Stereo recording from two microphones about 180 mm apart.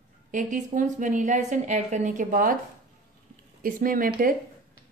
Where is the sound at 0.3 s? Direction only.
45° right (ahead or behind).